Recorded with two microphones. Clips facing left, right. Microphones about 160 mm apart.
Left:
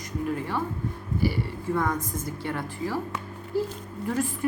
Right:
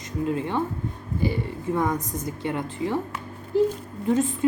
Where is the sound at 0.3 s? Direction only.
20° right (ahead or behind).